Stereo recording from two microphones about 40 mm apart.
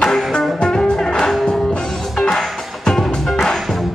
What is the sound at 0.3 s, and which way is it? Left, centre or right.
Music, centre.